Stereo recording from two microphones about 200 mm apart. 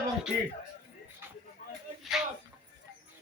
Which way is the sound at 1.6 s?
40° left (ahead or behind).